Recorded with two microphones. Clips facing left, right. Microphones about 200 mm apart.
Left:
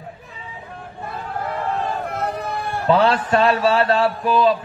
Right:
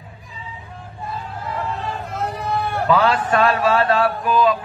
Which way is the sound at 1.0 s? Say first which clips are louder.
Left 2 dB; 60° left (ahead or behind).